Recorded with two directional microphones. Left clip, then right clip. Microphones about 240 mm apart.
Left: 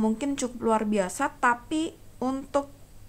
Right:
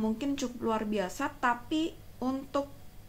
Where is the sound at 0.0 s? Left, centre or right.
Left.